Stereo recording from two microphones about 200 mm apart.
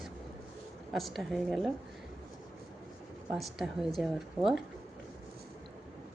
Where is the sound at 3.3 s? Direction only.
Centre (ahead or behind).